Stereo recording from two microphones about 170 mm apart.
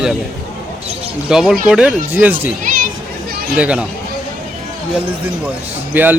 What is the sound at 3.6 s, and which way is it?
Speech, 5° right (ahead or behind).